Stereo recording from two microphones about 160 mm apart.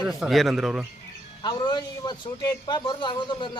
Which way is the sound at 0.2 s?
Centre (ahead or behind).